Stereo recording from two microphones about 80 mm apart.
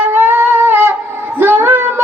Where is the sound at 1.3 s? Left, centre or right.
Right.